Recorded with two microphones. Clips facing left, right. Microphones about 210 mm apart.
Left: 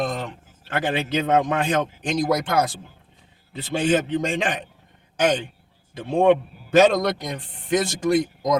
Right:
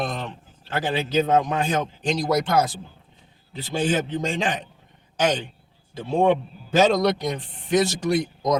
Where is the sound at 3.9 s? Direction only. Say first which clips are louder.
Left 6 dB; 60° left (ahead or behind).